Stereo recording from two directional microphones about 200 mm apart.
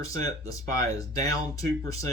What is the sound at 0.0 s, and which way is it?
Speech, 15° left (ahead or behind).